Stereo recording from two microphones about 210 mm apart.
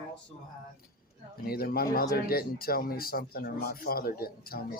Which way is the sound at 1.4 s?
45° left (ahead or behind).